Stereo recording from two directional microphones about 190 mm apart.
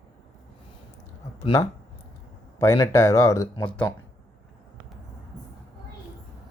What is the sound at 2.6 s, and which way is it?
Speech, 15° left (ahead or behind).